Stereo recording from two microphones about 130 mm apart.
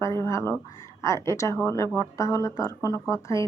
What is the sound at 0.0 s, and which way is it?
Speech, 20° left (ahead or behind).